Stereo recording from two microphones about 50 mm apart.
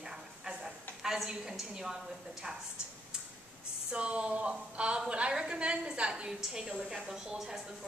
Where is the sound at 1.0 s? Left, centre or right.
Centre.